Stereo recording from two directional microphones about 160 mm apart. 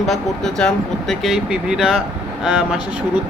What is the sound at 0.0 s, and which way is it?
Speech, centre (ahead or behind).